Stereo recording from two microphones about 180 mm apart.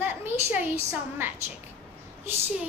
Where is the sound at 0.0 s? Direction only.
10° right (ahead or behind).